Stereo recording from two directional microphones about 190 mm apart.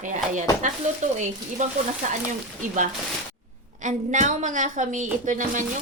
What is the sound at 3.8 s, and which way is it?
Speech, 40° right (ahead or behind).